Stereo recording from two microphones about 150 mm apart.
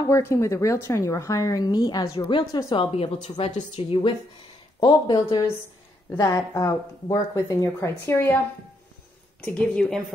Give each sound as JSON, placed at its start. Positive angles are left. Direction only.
{"t": 0.1, "sound": "speech", "side_deg": 20}
{"t": 3.5, "sound": "speech", "side_deg": 30}
{"t": 9.4, "sound": "speech", "side_deg": 5}